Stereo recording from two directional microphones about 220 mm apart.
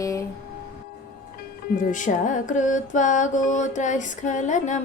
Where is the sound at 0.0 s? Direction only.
15° left (ahead or behind).